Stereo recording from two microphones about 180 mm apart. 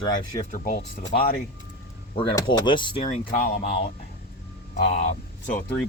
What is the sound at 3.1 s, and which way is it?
Speech, 45° left (ahead or behind).